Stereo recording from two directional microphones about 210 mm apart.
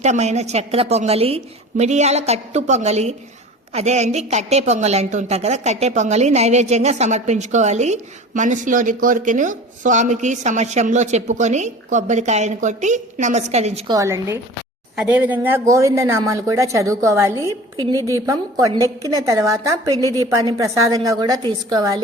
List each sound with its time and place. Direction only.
0.0 s a woman's voice: 35° right (ahead or behind)
13.9 s speech: 15° right (ahead or behind)